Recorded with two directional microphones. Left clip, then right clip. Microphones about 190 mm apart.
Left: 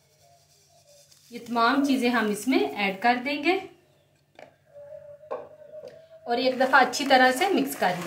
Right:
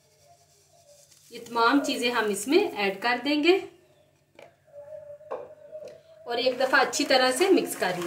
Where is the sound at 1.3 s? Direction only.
20° right (ahead or behind).